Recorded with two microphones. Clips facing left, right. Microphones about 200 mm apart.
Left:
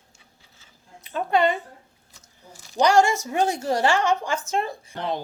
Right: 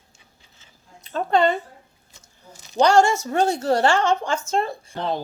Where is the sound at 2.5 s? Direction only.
20° right (ahead or behind).